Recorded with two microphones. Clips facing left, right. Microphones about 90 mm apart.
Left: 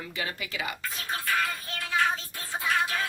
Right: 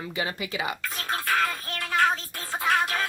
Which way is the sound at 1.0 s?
70° right (ahead or behind).